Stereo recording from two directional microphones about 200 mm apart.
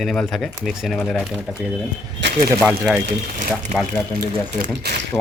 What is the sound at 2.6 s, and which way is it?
Speech, 5° right (ahead or behind).